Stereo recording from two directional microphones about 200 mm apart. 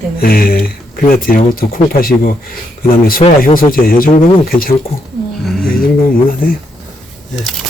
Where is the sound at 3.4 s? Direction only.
45° left (ahead or behind).